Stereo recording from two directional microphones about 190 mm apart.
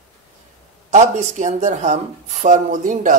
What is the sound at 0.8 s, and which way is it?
Speech, 35° right (ahead or behind).